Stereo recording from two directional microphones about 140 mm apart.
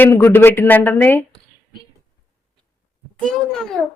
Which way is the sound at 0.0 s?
15° left (ahead or behind).